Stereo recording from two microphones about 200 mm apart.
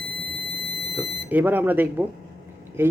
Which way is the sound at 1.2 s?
10° right (ahead or behind).